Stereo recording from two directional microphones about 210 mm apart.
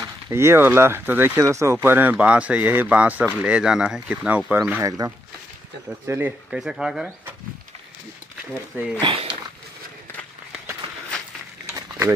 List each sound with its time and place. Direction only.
0.0 s speech: 15° right (ahead or behind)
9.0 s speech: 25° right (ahead or behind)